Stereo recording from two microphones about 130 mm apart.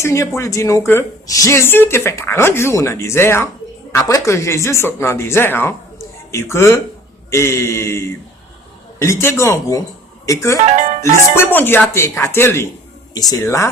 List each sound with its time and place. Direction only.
0.0 s a woman's voice: 25° left (ahead or behind)
10.7 s speech: 70° right (ahead or behind)
11.3 s a woman's voice: 15° left (ahead or behind)
13.1 s a woman's voice: 30° left (ahead or behind)